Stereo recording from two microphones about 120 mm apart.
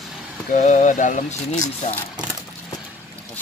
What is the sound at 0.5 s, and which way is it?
Speech, 80° left.